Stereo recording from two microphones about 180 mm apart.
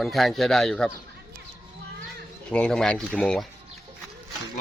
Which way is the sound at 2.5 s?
5° left (ahead or behind).